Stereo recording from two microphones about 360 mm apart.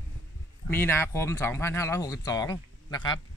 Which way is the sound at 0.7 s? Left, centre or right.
Centre.